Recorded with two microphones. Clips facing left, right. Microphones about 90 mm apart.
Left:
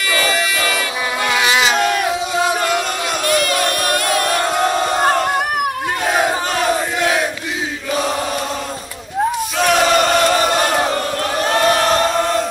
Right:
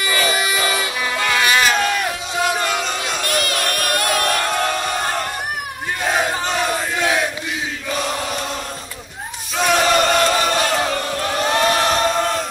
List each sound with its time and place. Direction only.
0.1 s a sound: 20° right (ahead or behind)
1.2 s a sound: 15° left (ahead or behind)
2.0 s crowd: 20° left (ahead or behind)
4.2 s crowd: 20° left (ahead or behind)
4.9 s crowd: 55° left (ahead or behind)
6.5 s battle cry: centre (ahead or behind)
9.6 s battle cry: centre (ahead or behind)
10.7 s choir: 15° left (ahead or behind)
11.4 s choir: centre (ahead or behind)